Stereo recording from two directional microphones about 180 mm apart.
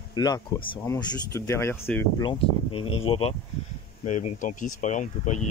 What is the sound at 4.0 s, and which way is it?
Speech, 45° left (ahead or behind).